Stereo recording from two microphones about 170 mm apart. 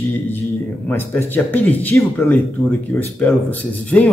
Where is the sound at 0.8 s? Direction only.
10° left (ahead or behind).